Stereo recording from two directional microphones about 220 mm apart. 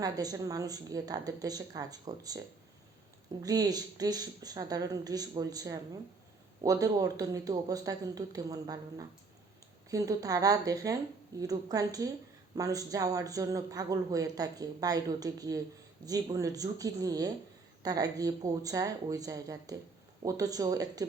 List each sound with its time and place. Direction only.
0.0 s a woman's voice: 15° right (ahead or behind)
3.4 s a woman's voice: 15° right (ahead or behind)